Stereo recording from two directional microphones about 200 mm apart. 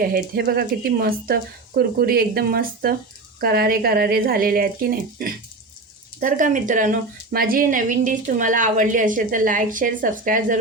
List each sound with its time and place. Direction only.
0.0 s speech: 50° right (ahead or behind)